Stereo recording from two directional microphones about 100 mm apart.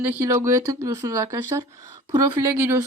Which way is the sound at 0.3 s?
30° right (ahead or behind).